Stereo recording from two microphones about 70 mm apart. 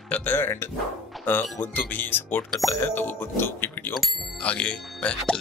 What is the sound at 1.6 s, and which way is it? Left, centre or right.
Speech, left.